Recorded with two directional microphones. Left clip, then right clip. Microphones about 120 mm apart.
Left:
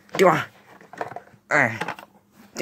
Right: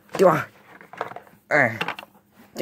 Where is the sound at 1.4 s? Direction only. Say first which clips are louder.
Right 1 dB; 35° right (ahead or behind).